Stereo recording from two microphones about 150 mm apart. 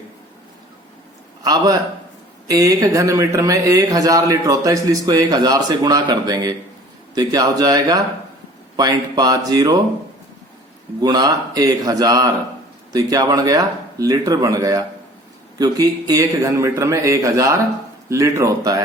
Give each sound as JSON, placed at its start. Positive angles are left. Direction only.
{"t": 1.4, "sound": "a man's voice", "side_deg": -25}
{"t": 11.0, "sound": "speech", "side_deg": -25}